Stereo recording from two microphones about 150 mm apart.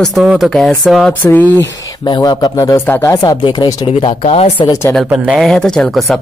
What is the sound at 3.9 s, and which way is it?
Speech, 40° left (ahead or behind).